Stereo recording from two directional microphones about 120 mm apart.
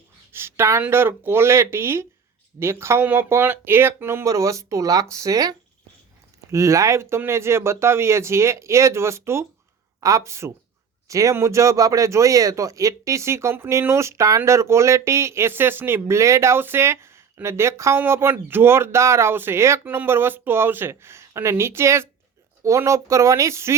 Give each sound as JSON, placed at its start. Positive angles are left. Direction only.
{"t": 0.3, "sound": "speech", "side_deg": -20}